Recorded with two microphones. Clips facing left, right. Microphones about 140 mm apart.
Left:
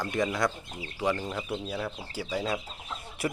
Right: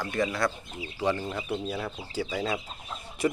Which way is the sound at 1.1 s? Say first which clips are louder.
Right 1 dB; 5° right (ahead or behind).